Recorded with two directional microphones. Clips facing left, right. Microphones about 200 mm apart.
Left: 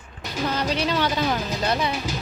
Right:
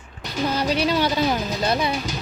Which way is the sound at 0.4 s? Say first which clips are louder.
Right 3 dB; 10° right (ahead or behind).